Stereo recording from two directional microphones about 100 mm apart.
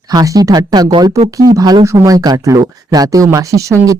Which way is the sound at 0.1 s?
40° right (ahead or behind).